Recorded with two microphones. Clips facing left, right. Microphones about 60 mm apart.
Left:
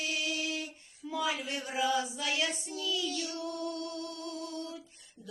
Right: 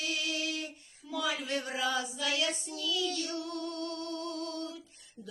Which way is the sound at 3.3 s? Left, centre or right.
Left.